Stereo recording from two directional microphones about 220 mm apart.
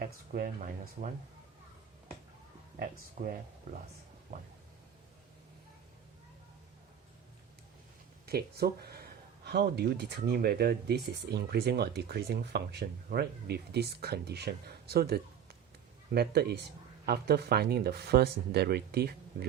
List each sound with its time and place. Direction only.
0.0 s speech: 40° right (ahead or behind)
2.7 s speech: 40° right (ahead or behind)
8.3 s speech: 45° right (ahead or behind)